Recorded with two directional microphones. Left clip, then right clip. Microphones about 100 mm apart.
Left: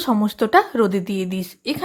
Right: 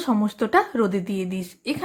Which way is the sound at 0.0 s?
20° left (ahead or behind).